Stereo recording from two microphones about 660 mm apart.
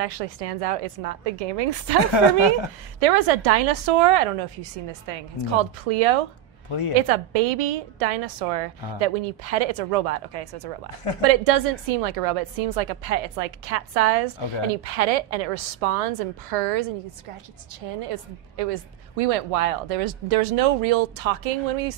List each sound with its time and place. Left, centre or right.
0.0 s a woman's voice: right
3.0 s a woman's voice: right